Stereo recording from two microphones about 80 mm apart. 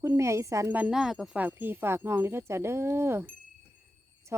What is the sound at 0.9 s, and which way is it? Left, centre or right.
Speech, centre.